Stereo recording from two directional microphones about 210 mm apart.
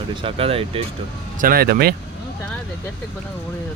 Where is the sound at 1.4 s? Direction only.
45° right (ahead or behind).